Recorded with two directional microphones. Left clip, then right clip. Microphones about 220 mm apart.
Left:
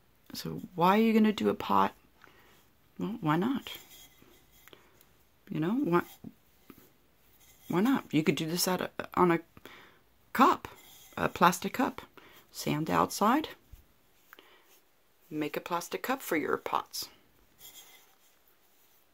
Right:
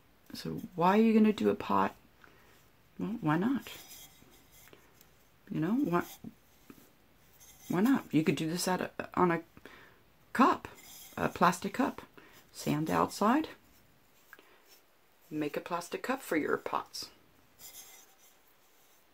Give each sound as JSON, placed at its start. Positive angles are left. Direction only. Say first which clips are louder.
{"t": 0.3, "sound": "speech", "louder": "left 1 dB", "side_deg": 30}
{"t": 4.7, "sound": "a sound", "louder": "left 4 dB", "side_deg": 30}
{"t": 5.5, "sound": "speech", "louder": "left 2 dB", "side_deg": 30}
{"t": 6.7, "sound": "writing", "louder": "left 1 dB", "side_deg": 25}
{"t": 7.6, "sound": "speech", "louder": "left 1 dB", "side_deg": 30}
{"t": 15.3, "sound": "speech", "louder": "left 2 dB", "side_deg": 30}